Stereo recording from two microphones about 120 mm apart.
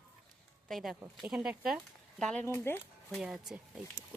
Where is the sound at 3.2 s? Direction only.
5° right (ahead or behind).